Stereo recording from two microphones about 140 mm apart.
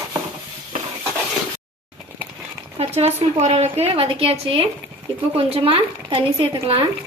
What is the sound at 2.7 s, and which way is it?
A woman's voice, 50° right (ahead or behind).